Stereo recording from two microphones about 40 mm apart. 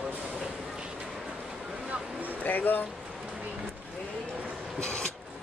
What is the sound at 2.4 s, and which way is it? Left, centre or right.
Speech, left.